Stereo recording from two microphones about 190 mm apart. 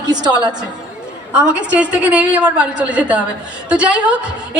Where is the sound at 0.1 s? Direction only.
20° right (ahead or behind).